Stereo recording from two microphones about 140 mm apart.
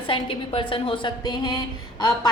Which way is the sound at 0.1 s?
40° left (ahead or behind).